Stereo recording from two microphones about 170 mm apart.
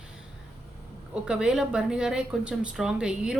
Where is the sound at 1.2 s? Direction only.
5° right (ahead or behind).